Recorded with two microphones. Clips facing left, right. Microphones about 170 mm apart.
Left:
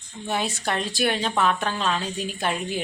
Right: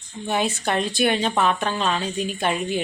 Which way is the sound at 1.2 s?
20° right (ahead or behind).